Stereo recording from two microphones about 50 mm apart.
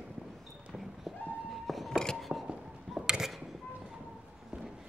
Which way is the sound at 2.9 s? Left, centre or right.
Centre.